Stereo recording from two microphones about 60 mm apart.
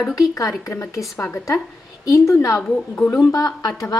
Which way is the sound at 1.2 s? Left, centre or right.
Left.